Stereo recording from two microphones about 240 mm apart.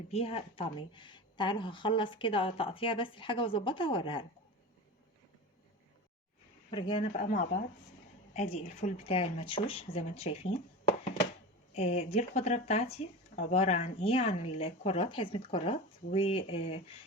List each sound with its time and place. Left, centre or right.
0.1 s a woman's voice: left
6.7 s a woman's voice: centre
7.1 s a woman's voice: left
11.7 s a woman's voice: left